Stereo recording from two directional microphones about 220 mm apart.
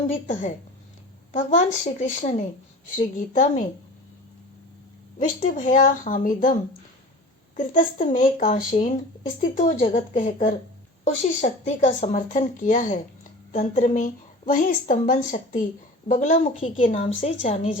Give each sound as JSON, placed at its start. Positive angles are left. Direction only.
{"t": 0.1, "sound": "a woman's voice", "side_deg": 35}
{"t": 5.2, "sound": "a woman's voice", "side_deg": 35}